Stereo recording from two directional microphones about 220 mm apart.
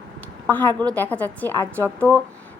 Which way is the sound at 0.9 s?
10° left (ahead or behind).